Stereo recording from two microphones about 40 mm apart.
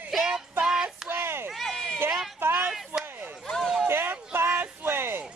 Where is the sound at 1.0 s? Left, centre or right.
Right.